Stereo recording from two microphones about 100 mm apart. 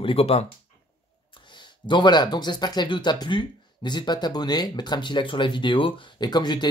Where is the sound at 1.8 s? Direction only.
50° left (ahead or behind).